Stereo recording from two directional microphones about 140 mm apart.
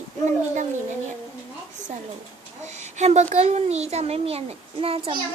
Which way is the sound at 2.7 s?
55° right (ahead or behind).